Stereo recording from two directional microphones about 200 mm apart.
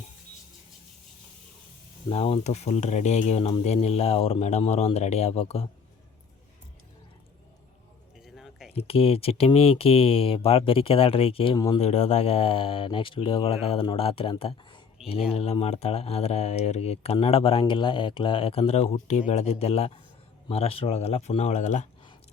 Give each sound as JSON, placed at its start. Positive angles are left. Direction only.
{"t": 2.0, "sound": "speech", "side_deg": 30}
{"t": 8.2, "sound": "a sound", "side_deg": 0}
{"t": 8.7, "sound": "speech", "side_deg": 30}
{"t": 11.8, "sound": "speech", "side_deg": 35}